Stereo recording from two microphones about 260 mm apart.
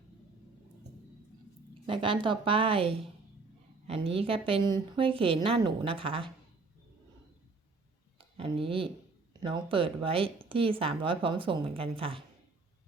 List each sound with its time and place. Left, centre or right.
1.9 s speech: centre
8.4 s speech: right